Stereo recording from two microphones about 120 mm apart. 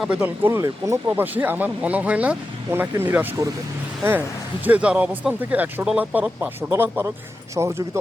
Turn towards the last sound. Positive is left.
turn(degrees=-20)  # may be behind; listen again after turning